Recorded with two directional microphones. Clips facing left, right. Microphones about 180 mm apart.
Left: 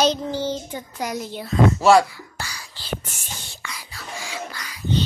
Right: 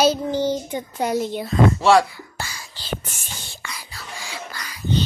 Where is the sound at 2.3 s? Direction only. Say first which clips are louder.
Right 2 dB; 25° right (ahead or behind).